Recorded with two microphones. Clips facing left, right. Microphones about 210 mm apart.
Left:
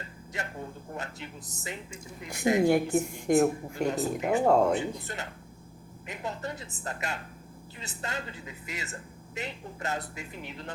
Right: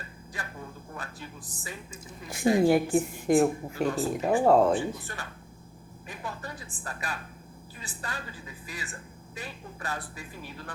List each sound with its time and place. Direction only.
0.9 s speech: 20° left (ahead or behind)
2.6 s speech: 5° right (ahead or behind)
3.8 s speech: 20° left (ahead or behind)